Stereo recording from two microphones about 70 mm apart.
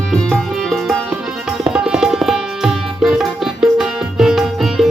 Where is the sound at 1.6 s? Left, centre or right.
Centre.